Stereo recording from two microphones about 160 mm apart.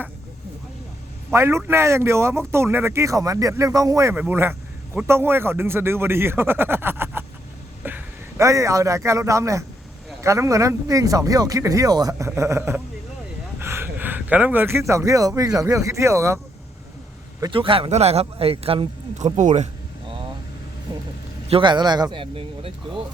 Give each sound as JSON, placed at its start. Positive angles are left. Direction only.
{"t": 1.3, "sound": "a man's voice", "side_deg": -15}
{"t": 17.4, "sound": "a man's voice", "side_deg": -35}
{"t": 21.4, "sound": "a man's voice", "side_deg": -35}